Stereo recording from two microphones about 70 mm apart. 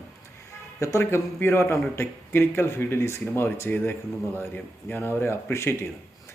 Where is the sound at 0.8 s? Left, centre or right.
Left.